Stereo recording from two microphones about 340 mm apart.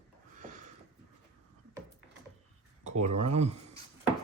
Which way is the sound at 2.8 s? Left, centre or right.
Centre.